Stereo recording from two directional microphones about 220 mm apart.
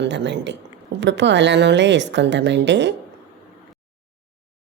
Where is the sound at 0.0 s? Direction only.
55° right (ahead or behind).